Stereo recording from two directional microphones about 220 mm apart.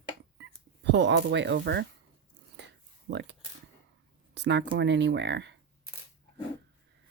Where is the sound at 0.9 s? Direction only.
50° right (ahead or behind).